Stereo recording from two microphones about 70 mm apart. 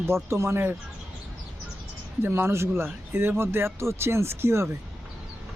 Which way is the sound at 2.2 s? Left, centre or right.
Right.